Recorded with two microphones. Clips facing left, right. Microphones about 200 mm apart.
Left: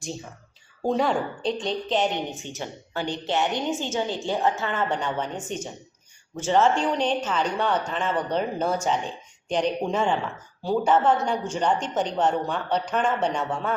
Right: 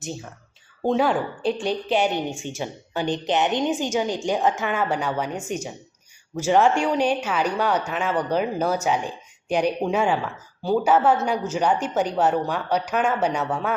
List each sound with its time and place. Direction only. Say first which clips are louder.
0.0 s a woman's voice: right 1 dB; centre (ahead or behind)